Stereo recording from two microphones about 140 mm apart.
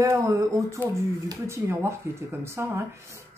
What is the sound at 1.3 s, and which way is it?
Speech, 20° right (ahead or behind).